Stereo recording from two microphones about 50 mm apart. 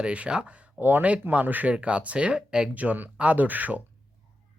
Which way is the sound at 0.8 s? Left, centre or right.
Right.